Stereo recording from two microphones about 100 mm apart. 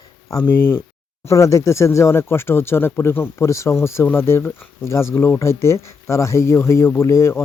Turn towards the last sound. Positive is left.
turn(degrees=30)  # may be behind; listen again after turning